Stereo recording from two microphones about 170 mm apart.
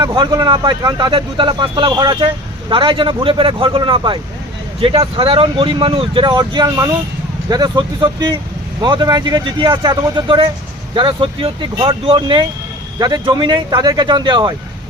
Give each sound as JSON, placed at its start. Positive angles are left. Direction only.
{"t": 0.0, "sound": "speech", "side_deg": -25}